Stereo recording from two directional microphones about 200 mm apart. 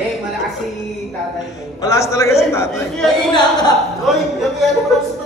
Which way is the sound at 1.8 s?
15° left (ahead or behind).